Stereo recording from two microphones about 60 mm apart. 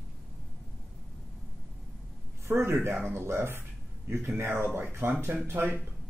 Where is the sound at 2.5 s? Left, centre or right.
Right.